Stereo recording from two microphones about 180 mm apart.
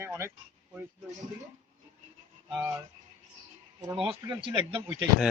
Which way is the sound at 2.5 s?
5° right (ahead or behind).